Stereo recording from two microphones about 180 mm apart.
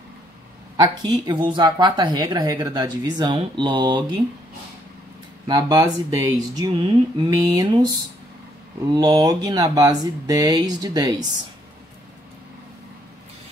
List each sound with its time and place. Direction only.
0.7 s speech: 25° right (ahead or behind)
5.5 s speech: 20° right (ahead or behind)
8.9 s speech: 20° right (ahead or behind)